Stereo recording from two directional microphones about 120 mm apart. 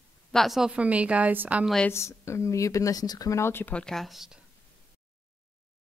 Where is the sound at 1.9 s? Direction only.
25° left (ahead or behind); by 4.4 s centre (ahead or behind).